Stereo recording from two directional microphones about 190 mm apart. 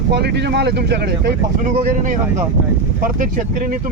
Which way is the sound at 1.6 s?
45° right (ahead or behind).